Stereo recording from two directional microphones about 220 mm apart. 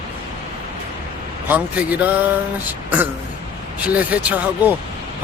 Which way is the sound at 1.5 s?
5° right (ahead or behind).